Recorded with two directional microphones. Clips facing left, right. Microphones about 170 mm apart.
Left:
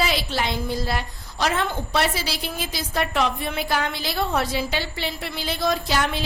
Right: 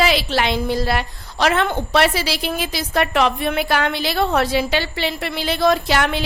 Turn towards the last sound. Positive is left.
turn(degrees=-70)  # may be behind; listen again after turning